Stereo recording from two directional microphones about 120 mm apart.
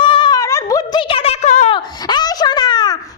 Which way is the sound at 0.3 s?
25° left (ahead or behind).